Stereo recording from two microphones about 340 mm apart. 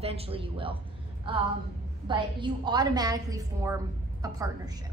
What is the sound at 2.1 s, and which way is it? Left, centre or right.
A woman's voice, centre.